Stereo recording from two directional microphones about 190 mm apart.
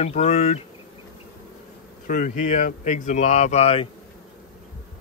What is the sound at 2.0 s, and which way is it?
Speech, 45° left (ahead or behind).